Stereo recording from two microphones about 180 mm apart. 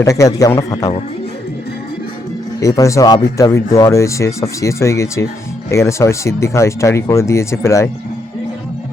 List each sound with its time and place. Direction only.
0.0 s a man's voice: 20° left (ahead or behind)
2.6 s speech: 20° left (ahead or behind)